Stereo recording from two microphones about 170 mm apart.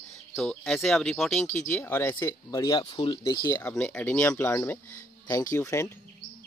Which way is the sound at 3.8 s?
10° left (ahead or behind).